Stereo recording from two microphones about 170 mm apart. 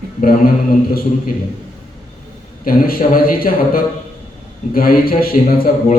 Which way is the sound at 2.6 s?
60° left (ahead or behind).